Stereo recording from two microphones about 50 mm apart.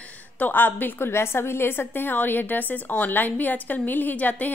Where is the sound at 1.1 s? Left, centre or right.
Left.